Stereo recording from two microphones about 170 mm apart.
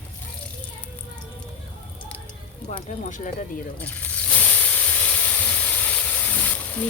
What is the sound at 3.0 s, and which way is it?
Speech, 50° left (ahead or behind).